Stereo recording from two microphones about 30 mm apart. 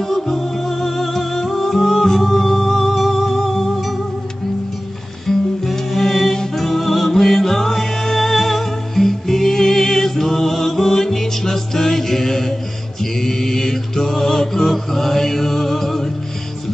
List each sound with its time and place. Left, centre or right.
0.0 s music: centre
5.2 s music: centre
13.0 s mantra: centre